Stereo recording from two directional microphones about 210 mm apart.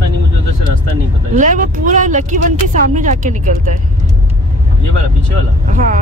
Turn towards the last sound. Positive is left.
turn(degrees=-40)  # may be behind; listen again after turning